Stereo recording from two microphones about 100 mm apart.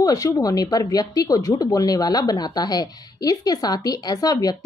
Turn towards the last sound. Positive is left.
turn(degrees=40)  # may be behind; listen again after turning